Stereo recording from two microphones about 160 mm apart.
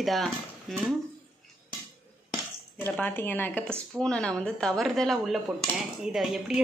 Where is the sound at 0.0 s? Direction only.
Centre (ahead or behind).